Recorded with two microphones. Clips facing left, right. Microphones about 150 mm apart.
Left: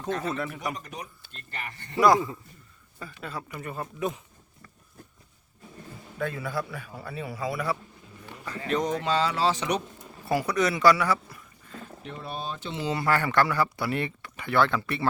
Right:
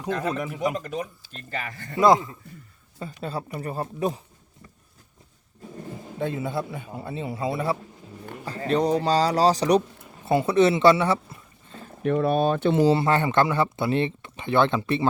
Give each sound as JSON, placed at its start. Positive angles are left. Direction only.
{"t": 0.1, "sound": "speech", "side_deg": -90}
{"t": 0.3, "sound": "speech", "side_deg": -15}
{"t": 1.5, "sound": "speech", "side_deg": -90}
{"t": 2.0, "sound": "speech", "side_deg": -20}
{"t": 3.0, "sound": "speech", "side_deg": -35}
{"t": 6.1, "sound": "speech", "side_deg": -25}
{"t": 10.2, "sound": "speech", "side_deg": -25}
{"t": 12.0, "sound": "speech", "side_deg": -60}
{"t": 12.8, "sound": "speech", "side_deg": -30}